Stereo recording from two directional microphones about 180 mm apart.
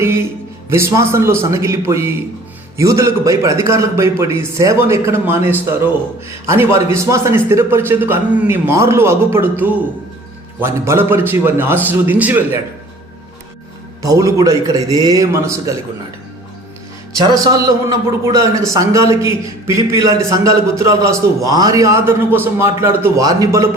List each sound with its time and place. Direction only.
0.0 s a man's voice: 15° right (ahead or behind)
14.0 s a man's voice: 20° right (ahead or behind)
17.2 s a man's voice: 20° right (ahead or behind)